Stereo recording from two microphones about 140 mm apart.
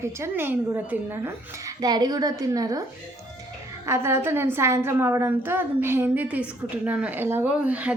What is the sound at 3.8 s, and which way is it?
A woman's voice, 20° right (ahead or behind).